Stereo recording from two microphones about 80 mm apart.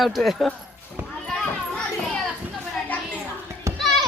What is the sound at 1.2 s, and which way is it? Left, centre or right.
Children playing, centre.